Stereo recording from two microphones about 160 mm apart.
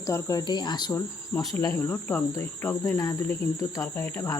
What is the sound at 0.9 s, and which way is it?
Speech, 10° left (ahead or behind).